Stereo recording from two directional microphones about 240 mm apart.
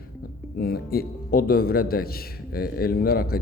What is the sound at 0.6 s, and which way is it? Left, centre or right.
Speech, left.